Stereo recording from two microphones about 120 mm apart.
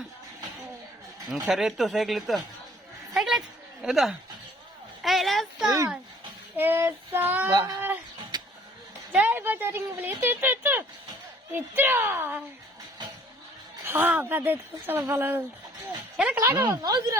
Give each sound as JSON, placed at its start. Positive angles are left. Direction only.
{"t": 1.3, "sound": "speech", "side_deg": -5}
{"t": 3.1, "sound": "a sound", "side_deg": 0}
{"t": 3.8, "sound": "speech", "side_deg": 0}
{"t": 5.0, "sound": "a sound", "side_deg": 0}
{"t": 6.6, "sound": "speech", "side_deg": -20}
{"t": 7.5, "sound": "a woman's voice", "side_deg": -25}
{"t": 8.3, "sound": "a sound", "side_deg": -35}
{"t": 9.1, "sound": "a woman's voice", "side_deg": -15}
{"t": 13.8, "sound": "speech", "side_deg": -15}
{"t": 16.4, "sound": "a woman's voice", "side_deg": -20}
{"t": 16.6, "sound": "speech", "side_deg": -30}